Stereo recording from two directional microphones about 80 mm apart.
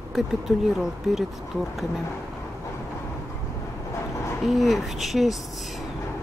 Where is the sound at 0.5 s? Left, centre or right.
Centre.